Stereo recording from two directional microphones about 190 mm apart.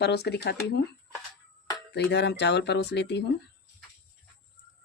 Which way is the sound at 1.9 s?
65° left (ahead or behind).